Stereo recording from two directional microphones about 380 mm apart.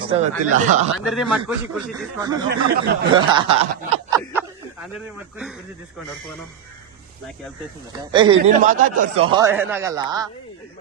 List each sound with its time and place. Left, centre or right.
0.0 s speech: centre
1.0 s speech: centre
2.5 s speech: right
3.1 s speech: centre
8.1 s speech: centre